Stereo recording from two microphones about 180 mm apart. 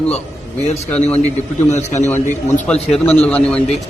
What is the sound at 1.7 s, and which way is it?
Speech, 40° left (ahead or behind).